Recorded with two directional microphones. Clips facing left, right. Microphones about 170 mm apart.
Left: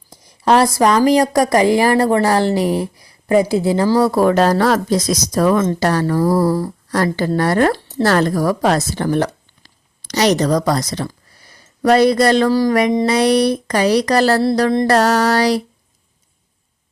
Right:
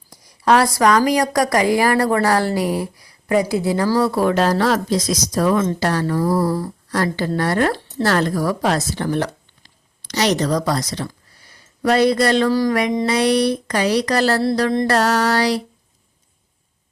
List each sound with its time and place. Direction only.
0.1 s a woman's voice: 25° left (ahead or behind)
4.0 s speech: 45° left (ahead or behind)